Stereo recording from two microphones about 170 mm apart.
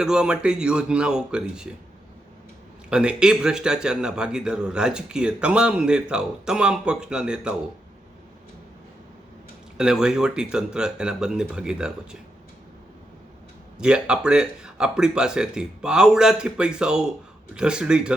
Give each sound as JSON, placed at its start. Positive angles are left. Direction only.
{"t": 0.0, "sound": "speech", "side_deg": -5}
{"t": 2.9, "sound": "speech", "side_deg": -5}
{"t": 9.7, "sound": "speech", "side_deg": -5}
{"t": 13.7, "sound": "speech", "side_deg": -5}